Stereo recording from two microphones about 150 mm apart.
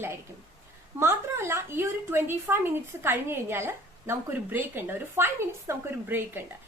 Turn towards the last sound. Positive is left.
turn(degrees=-15)  # may be behind; listen again after turning